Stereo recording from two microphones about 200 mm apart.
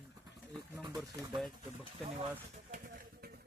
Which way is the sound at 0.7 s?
20° right (ahead or behind).